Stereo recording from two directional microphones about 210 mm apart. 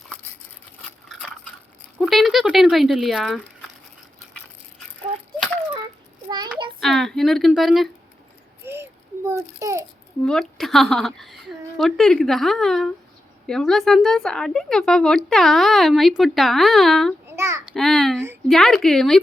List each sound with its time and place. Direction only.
0.8 s a sound: centre (ahead or behind)
2.0 s speech: centre (ahead or behind)
6.2 s child singing: 20° right (ahead or behind)
6.7 s a woman's voice: centre (ahead or behind)
8.6 s a sound: 10° right (ahead or behind)
10.2 s a woman's voice: centre (ahead or behind)
17.2 s child singing: 15° right (ahead or behind)
17.7 s a woman's voice: centre (ahead or behind)